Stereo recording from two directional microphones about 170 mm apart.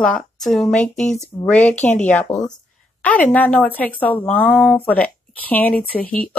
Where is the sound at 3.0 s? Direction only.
10° left (ahead or behind).